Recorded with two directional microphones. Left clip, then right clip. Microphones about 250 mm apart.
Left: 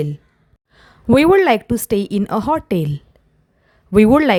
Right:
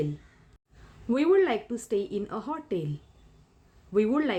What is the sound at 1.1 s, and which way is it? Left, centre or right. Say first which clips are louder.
A woman's voice: left 12 dB; left.